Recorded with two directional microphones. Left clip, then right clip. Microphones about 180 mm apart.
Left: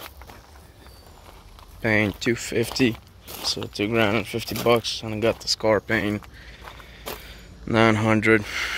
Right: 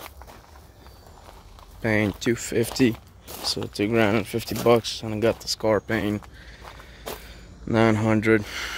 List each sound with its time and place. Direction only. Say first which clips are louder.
1.8 s speech: left 2 dB; 10° right (ahead or behind)
2.1 s speech: even; 25° right (ahead or behind)
2.9 s a sound: even; 5° right (ahead or behind)
3.7 s speech: even; 30° right (ahead or behind)